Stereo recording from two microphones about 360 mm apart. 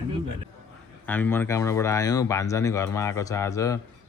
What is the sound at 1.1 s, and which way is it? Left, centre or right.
Speech, centre.